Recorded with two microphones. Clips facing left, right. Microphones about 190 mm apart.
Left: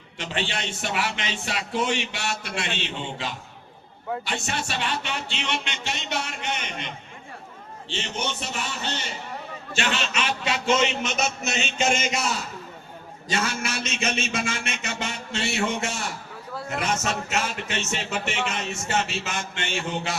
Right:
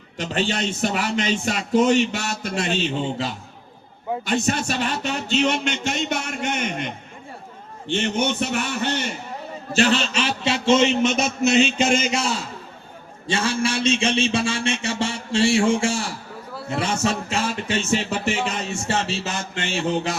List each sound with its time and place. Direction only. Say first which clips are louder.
0.2 s a man's voice: right 6 dB; 40° right (ahead or behind)
9.7 s a man's voice: right 7 dB; 35° right (ahead or behind)